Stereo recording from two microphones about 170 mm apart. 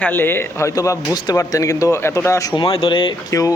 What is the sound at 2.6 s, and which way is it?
Speech, 30° left (ahead or behind).